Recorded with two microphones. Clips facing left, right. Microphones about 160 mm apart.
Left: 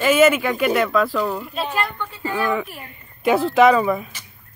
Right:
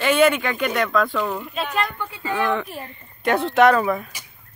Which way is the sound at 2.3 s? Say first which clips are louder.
Even; 5° left (ahead or behind).